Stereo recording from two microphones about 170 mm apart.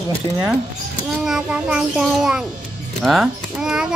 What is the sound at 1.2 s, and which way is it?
A child's voice, 5° right (ahead or behind).